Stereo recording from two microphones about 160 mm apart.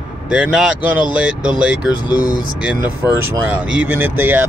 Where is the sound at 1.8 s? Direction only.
25° left (ahead or behind).